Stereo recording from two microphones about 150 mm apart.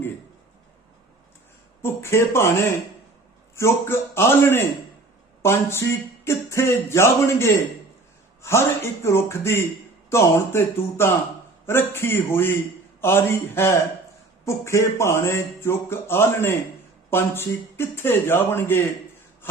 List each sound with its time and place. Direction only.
1.8 s speech: 15° left (ahead or behind)
3.5 s a man's voice: 15° left (ahead or behind)